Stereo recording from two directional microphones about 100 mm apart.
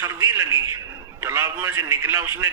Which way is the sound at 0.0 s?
30° right (ahead or behind).